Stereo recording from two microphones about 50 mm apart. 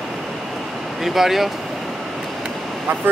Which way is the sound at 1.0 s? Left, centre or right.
Centre.